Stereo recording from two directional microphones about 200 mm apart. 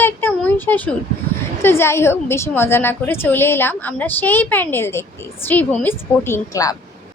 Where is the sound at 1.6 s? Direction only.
10° left (ahead or behind).